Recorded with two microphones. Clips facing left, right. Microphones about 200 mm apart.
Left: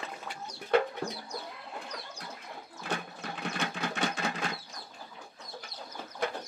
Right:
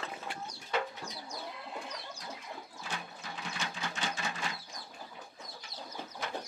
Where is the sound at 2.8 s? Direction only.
60° left (ahead or behind).